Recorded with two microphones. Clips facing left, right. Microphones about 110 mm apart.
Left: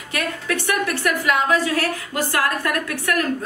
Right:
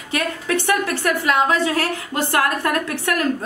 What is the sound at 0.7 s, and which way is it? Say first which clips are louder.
A woman's voice: right 1 dB; 25° right (ahead or behind).